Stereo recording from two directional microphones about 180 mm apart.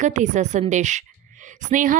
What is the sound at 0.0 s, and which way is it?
Speech, 45° right (ahead or behind).